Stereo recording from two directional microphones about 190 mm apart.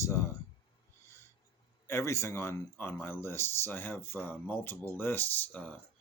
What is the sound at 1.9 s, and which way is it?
Speech, 15° left (ahead or behind).